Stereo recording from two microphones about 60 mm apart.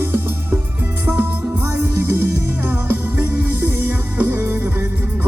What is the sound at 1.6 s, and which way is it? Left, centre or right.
Music, right.